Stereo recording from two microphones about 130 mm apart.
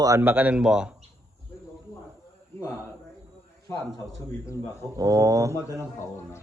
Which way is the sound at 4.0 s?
25° left (ahead or behind).